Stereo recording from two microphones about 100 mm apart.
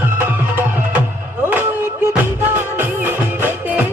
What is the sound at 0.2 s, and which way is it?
Music, 20° right (ahead or behind).